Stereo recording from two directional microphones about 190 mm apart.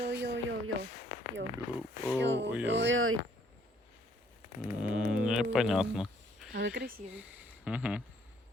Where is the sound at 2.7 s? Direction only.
75° right (ahead or behind).